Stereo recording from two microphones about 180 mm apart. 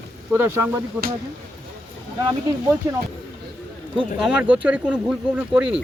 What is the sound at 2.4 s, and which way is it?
Speech, 15° right (ahead or behind).